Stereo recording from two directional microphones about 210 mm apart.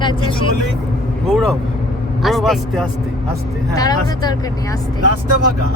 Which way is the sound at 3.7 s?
15° left (ahead or behind).